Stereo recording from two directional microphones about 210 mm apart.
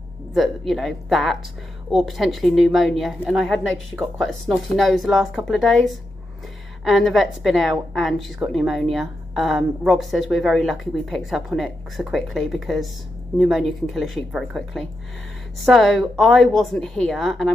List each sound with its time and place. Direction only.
0.3 s speech: centre (ahead or behind)